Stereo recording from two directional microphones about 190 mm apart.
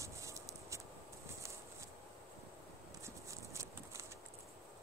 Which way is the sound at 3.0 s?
15° right (ahead or behind).